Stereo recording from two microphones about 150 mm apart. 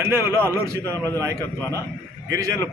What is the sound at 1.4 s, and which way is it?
Speech, 15° left (ahead or behind).